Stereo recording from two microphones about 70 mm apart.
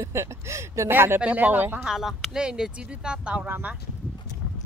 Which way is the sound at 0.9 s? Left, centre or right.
Right.